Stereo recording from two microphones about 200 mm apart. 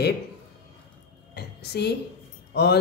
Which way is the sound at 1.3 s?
50° left (ahead or behind).